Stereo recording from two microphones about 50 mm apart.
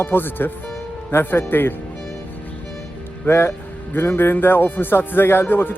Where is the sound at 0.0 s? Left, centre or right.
Left.